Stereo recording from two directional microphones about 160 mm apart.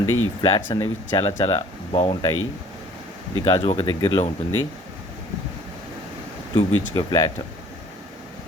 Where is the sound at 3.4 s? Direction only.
30° left (ahead or behind).